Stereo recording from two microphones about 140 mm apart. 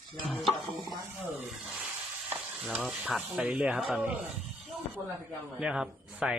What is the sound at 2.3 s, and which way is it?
A man's voice, 10° right (ahead or behind).